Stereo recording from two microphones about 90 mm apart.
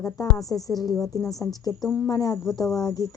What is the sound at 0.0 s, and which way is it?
A woman's voice, 40° left (ahead or behind).